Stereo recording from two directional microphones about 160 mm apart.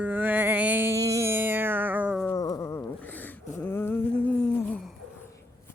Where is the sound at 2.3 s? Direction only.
20° left (ahead or behind).